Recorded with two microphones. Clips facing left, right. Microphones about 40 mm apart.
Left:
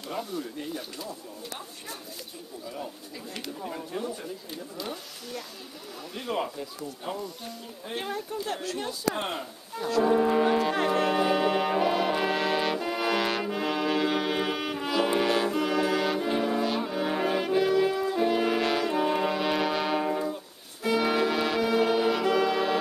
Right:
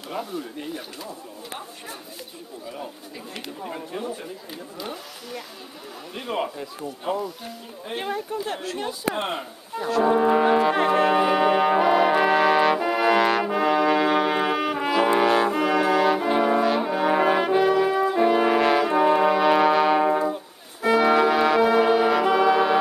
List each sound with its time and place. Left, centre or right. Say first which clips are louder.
0.1 s speech: right 3 dB; right
3.3 s speech: right 2 dB; right
6.1 s speech: right 3 dB; right
7.9 s speech: right 5 dB; right
9.2 s brass instrument: right 4 dB; right; by 14.8 s centre
14.8 s brass instrument: right 5 dB; right
16.3 s brass instrument: right 7 dB; right; by 17.9 s centre
17.9 s brass instrument: right 6 dB; right
20.1 s music: right 7 dB; right
21.0 s brass instrument: right 8 dB; centre